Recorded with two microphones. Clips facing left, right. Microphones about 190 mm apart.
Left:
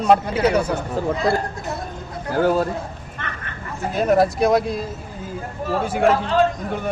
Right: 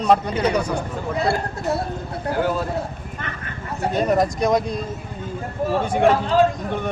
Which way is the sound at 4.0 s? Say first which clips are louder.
Left 3 dB; 5° left (ahead or behind).